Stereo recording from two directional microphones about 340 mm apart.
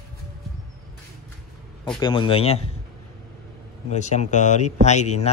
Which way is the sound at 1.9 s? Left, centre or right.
Centre.